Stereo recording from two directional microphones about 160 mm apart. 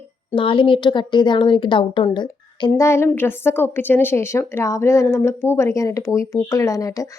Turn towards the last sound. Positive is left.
turn(degrees=20)  # may be behind; listen again after turning